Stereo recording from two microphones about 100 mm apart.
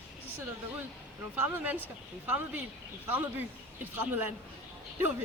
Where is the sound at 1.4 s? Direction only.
15° right (ahead or behind).